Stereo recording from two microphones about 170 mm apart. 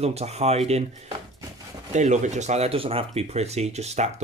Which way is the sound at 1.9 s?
45° right (ahead or behind).